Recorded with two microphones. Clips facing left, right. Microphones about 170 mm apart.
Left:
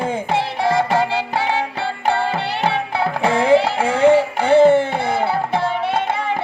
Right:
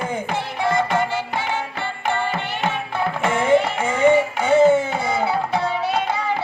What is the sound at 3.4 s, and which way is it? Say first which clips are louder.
Music: left 3 dB; 70° left (ahead or behind).